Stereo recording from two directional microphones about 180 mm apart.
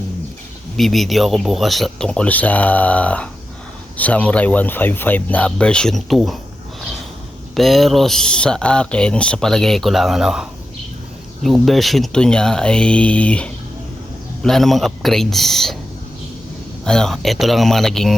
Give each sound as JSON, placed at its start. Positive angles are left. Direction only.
{"t": 0.8, "sound": "speech", "side_deg": 0}
{"t": 7.5, "sound": "speech", "side_deg": 0}
{"t": 11.4, "sound": "speech", "side_deg": 0}
{"t": 16.8, "sound": "speech", "side_deg": 5}